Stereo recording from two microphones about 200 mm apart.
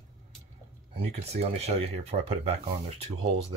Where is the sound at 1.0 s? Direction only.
30° right (ahead or behind).